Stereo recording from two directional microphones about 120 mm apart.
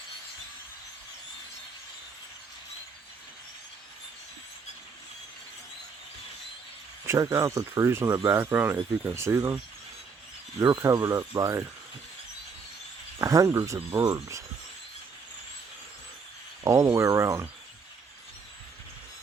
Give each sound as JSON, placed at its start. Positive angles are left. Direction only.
{"t": 7.0, "sound": "speech", "side_deg": -25}
{"t": 10.6, "sound": "speech", "side_deg": -25}
{"t": 13.1, "sound": "speech", "side_deg": -25}
{"t": 16.6, "sound": "speech", "side_deg": -30}